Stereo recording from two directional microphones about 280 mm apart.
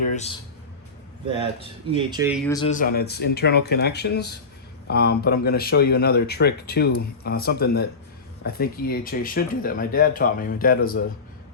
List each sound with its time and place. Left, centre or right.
0.1 s speech: left
1.4 s speech: centre
2.6 s speech: left